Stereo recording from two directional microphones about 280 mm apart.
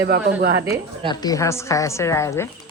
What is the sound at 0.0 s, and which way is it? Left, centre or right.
Speech, right.